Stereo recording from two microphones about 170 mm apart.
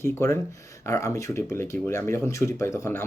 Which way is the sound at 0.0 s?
15° left (ahead or behind).